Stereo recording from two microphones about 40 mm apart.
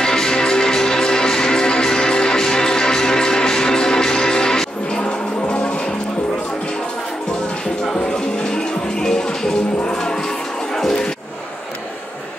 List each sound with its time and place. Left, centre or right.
0.0 s music: centre
7.9 s music: centre